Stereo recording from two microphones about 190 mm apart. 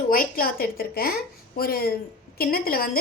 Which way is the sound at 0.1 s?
50° left (ahead or behind).